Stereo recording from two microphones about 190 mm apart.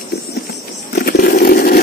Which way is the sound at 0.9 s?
50° left (ahead or behind).